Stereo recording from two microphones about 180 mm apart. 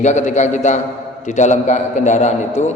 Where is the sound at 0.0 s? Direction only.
40° left (ahead or behind).